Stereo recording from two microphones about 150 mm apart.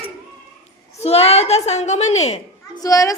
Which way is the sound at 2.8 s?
25° left (ahead or behind).